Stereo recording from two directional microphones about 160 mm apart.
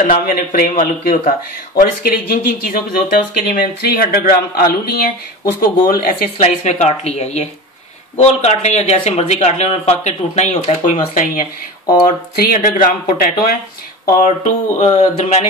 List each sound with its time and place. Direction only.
0.0 s speech: 60° left (ahead or behind)
1.8 s speech: 65° left (ahead or behind)
6.4 s speech: 45° left (ahead or behind)
12.6 s speech: 55° left (ahead or behind); by 15.4 s 40° left (ahead or behind)